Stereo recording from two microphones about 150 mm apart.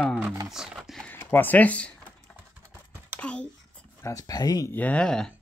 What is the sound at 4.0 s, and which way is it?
Speech, 20° left (ahead or behind).